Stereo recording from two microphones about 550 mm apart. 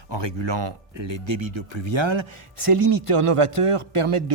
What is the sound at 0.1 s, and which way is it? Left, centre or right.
Speech, right.